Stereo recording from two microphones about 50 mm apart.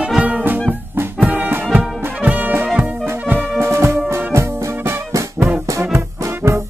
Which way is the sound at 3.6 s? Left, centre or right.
Right.